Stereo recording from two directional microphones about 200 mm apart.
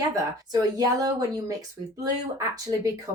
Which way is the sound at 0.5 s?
20° right (ahead or behind).